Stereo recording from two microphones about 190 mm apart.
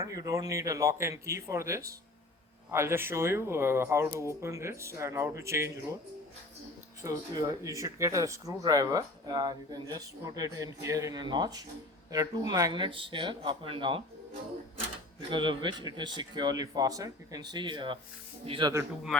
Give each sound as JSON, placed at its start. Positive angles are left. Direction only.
{"t": 0.0, "sound": "speech", "side_deg": -15}
{"t": 7.0, "sound": "speech", "side_deg": -15}
{"t": 15.3, "sound": "speech", "side_deg": -25}